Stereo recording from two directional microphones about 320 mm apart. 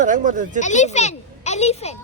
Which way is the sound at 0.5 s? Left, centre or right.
Left.